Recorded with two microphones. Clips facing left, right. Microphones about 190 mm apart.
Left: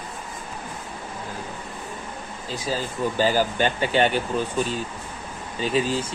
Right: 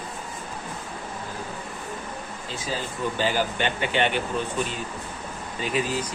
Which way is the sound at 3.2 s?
40° left (ahead or behind).